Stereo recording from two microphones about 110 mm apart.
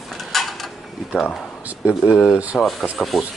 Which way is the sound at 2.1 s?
25° left (ahead or behind).